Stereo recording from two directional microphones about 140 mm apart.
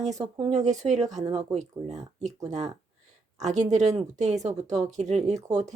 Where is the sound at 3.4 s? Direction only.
55° right (ahead or behind).